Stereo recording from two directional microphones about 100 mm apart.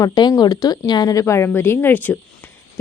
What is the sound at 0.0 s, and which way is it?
A woman's voice, 45° left (ahead or behind).